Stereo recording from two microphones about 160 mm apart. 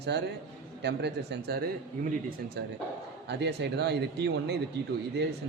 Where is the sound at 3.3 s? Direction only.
90° right.